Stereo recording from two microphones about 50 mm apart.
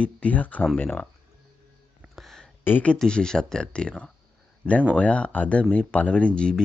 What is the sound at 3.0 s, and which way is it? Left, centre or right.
Speech, centre.